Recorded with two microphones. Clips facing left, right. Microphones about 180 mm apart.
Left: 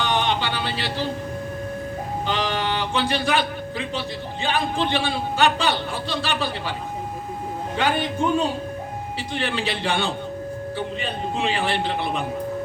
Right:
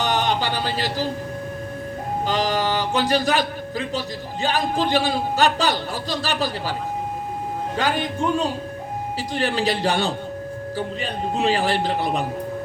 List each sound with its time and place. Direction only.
0.0 s speech: 40° right (ahead or behind)
2.2 s a man's voice: 40° right (ahead or behind)
7.9 s speech: 5° left (ahead or behind)
9.1 s a man's voice: 40° right (ahead or behind)